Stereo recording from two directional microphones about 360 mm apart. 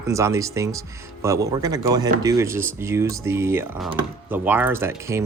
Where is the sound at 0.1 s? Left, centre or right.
Centre.